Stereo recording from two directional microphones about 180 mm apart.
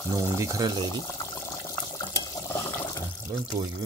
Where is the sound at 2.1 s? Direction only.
15° left (ahead or behind).